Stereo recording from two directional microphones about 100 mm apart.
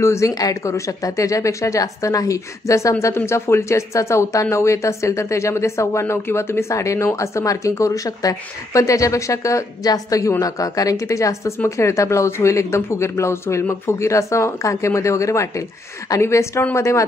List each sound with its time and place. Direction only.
0.0 s speech: 30° left (ahead or behind)